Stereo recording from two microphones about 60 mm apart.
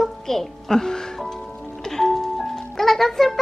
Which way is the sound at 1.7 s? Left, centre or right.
Centre.